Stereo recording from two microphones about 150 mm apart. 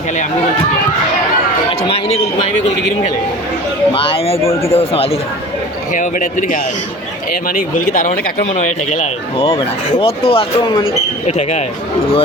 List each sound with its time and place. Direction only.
1.9 s a man's voice: 45° left (ahead or behind)
3.9 s speech: 35° left (ahead or behind)
5.9 s speech: 60° left (ahead or behind)
7.4 s speech: 70° left (ahead or behind)
9.4 s speech: 30° left (ahead or behind)
11.3 s a man's voice: 50° left (ahead or behind)